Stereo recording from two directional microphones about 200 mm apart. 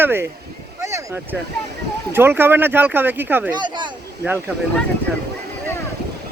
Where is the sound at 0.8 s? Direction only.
15° right (ahead or behind).